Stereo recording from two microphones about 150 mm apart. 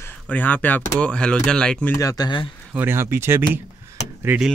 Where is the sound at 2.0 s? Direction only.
25° left (ahead or behind).